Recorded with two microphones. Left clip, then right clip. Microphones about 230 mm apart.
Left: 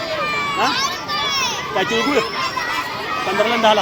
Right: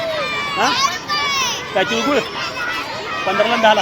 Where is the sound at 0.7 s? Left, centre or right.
Right.